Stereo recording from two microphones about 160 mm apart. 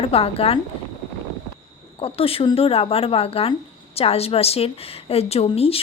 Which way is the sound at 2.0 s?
35° left (ahead or behind).